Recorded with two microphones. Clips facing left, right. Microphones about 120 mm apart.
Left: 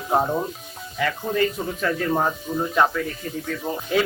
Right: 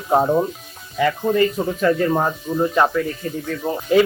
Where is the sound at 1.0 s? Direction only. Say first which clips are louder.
Right 5 dB; 5° right (ahead or behind).